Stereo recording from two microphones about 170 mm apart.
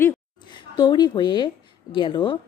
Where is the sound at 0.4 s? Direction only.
25° left (ahead or behind).